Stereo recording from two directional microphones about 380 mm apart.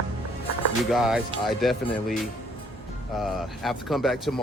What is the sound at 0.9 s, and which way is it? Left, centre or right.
Speech, centre.